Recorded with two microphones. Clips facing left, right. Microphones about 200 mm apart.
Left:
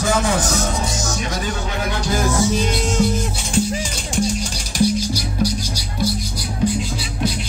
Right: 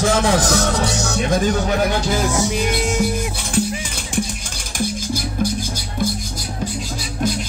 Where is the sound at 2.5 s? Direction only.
10° right (ahead or behind).